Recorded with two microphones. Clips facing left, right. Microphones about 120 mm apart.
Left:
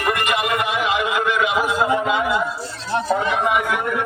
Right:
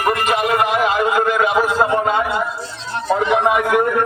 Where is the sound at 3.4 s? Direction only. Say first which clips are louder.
Right 5 dB; 45° right (ahead or behind).